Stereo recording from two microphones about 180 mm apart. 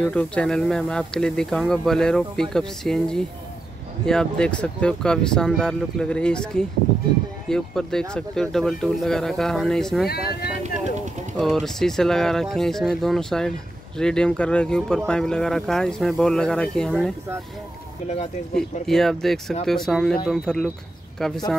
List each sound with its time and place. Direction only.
0.0 s speech: 5° left (ahead or behind)
10.0 s speech: 60° left (ahead or behind)
10.6 s speech: 40° right (ahead or behind)
11.3 s speech: centre (ahead or behind)
18.0 s speech: 40° left (ahead or behind)
18.5 s speech: centre (ahead or behind)